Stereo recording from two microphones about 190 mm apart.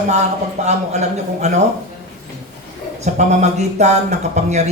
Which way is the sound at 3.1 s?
40° right (ahead or behind).